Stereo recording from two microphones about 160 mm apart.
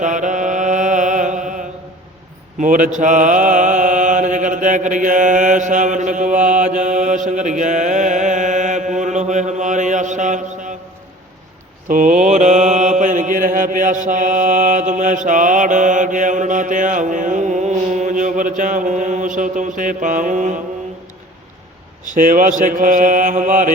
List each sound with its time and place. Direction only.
0.0 s mantra: 50° right (ahead or behind)
2.6 s mantra: 55° right (ahead or behind)
11.9 s mantra: 55° right (ahead or behind)
22.1 s mantra: 55° right (ahead or behind)